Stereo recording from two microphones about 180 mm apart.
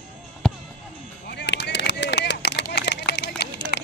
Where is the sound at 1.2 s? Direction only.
70° left (ahead or behind).